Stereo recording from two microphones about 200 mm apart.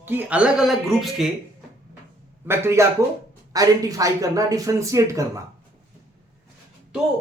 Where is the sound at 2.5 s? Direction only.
10° right (ahead or behind).